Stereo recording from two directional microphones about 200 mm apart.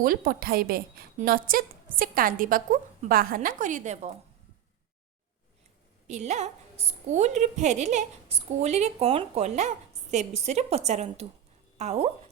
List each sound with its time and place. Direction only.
0.0 s a woman's voice: 45° right (ahead or behind)
6.1 s a woman's voice: 35° right (ahead or behind)